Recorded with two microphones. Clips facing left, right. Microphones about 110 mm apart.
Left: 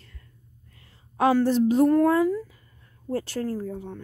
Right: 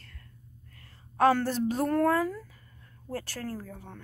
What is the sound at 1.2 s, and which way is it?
Speech, 15° left (ahead or behind).